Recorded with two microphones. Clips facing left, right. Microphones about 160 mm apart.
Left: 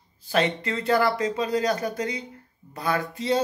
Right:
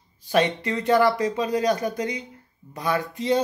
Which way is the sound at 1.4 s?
20° right (ahead or behind).